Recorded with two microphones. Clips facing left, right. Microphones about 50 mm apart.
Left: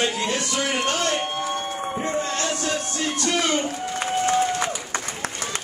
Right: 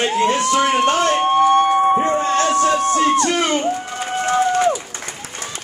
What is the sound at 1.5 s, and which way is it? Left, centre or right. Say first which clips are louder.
Music: right 14 dB; right.